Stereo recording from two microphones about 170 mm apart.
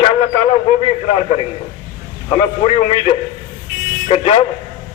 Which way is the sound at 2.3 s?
30° left (ahead or behind).